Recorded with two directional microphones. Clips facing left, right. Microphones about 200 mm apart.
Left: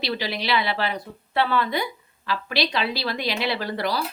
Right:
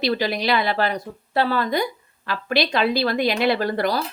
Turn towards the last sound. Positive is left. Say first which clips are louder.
# right 5 dB
turn(degrees=-50)  # may be behind; listen again after turning